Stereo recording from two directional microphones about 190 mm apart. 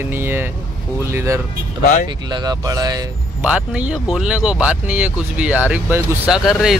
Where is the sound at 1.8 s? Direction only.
40° left (ahead or behind).